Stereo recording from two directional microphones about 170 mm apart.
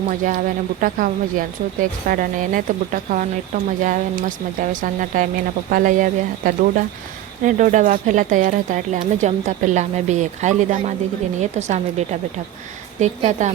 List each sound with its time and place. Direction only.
0.1 s speech: 50° right (ahead or behind)